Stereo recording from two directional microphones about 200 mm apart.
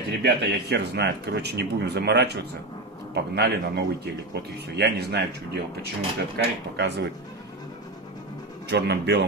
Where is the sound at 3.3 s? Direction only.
55° right (ahead or behind).